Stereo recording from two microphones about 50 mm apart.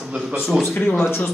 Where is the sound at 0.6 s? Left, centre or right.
Left.